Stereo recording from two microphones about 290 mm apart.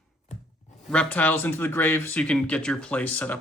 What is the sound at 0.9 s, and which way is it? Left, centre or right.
Speech, centre.